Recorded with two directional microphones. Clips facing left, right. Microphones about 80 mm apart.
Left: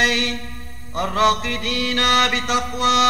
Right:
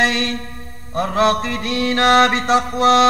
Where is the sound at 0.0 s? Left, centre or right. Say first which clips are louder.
Right 2 dB; right.